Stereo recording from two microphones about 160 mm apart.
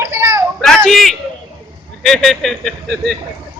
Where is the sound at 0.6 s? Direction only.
5° left (ahead or behind).